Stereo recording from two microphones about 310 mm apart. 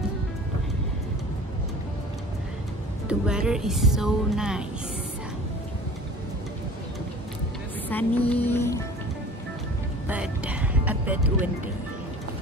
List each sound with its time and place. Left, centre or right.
3.1 s speech: centre
7.9 s speech: centre
10.0 s music: centre